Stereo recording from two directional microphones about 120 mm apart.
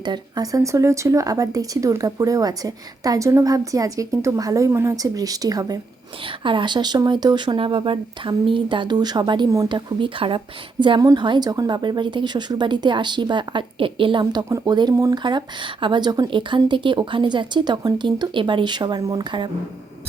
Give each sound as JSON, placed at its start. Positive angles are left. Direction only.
{"t": 0.0, "sound": "speech", "side_deg": -35}
{"t": 6.2, "sound": "speech", "side_deg": -45}